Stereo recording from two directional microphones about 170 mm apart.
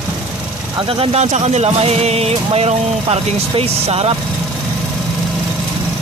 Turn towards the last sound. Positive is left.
turn(degrees=-35)  # may be behind; listen again after turning